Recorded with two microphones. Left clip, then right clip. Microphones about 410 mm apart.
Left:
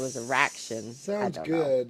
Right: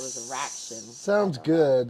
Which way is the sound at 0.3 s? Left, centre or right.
Left.